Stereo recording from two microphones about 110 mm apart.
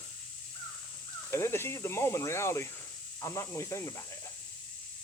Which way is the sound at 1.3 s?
20° left (ahead or behind).